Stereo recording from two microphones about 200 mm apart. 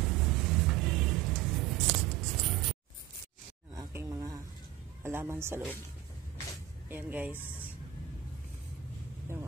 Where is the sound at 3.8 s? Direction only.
15° right (ahead or behind).